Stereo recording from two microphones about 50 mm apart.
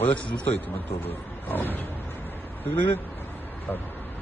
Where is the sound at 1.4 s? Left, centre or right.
Left.